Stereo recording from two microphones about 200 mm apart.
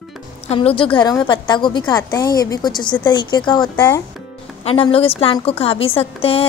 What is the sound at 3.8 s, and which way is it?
Speech, 10° left (ahead or behind).